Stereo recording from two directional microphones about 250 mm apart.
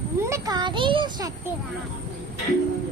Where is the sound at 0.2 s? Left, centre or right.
Centre.